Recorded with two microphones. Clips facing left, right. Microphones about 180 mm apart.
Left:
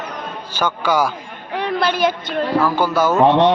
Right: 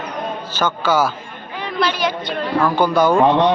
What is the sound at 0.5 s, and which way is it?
Speech, 10° left (ahead or behind).